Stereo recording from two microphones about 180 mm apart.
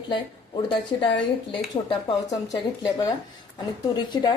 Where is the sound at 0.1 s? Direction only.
25° left (ahead or behind).